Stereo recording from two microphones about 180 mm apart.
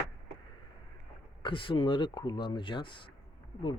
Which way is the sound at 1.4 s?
30° left (ahead or behind).